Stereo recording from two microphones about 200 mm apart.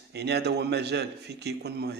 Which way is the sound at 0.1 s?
55° right (ahead or behind).